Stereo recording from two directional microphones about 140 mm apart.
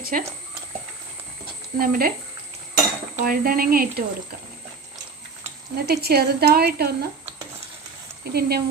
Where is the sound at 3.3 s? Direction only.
90° right.